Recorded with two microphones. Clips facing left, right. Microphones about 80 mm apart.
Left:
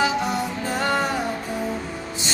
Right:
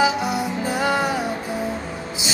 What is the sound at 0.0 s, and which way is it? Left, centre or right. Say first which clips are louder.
Music: right 2 dB; centre.